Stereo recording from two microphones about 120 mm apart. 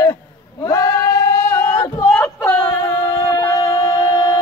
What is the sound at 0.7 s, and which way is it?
Singing, 25° left (ahead or behind).